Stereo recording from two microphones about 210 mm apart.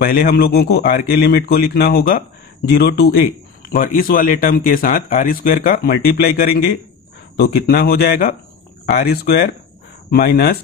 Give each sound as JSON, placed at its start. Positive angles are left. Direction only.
{"t": 0.0, "sound": "speech", "side_deg": 45}